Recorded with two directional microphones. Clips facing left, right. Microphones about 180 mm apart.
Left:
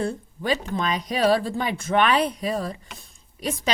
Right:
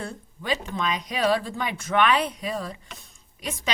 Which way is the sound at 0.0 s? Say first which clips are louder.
Left 8 dB; 35° left (ahead or behind).